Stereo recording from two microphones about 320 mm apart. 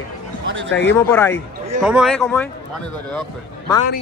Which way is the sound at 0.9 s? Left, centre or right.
Centre.